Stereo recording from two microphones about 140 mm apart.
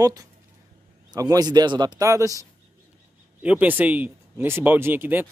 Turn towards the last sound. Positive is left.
turn(degrees=-15)  # may be behind; listen again after turning